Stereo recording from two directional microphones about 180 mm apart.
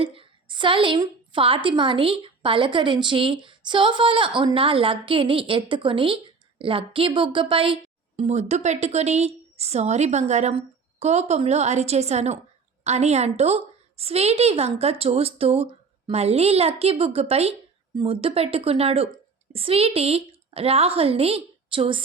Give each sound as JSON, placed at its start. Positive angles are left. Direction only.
{"t": 0.0, "sound": "a woman's voice", "side_deg": -30}